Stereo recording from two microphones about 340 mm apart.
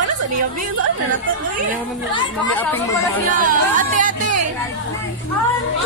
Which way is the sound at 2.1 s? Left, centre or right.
Centre.